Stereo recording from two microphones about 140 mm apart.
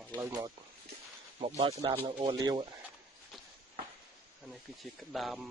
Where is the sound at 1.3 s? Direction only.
50° right (ahead or behind).